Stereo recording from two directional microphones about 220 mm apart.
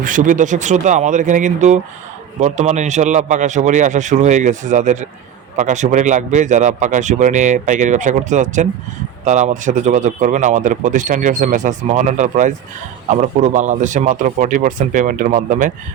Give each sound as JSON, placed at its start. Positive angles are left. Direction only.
{"t": 0.0, "sound": "speech", "side_deg": -35}